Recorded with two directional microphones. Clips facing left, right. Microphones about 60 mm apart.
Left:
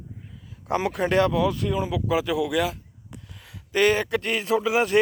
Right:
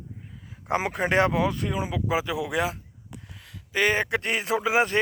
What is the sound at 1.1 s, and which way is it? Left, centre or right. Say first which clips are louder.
Speech: left 1 dB; right.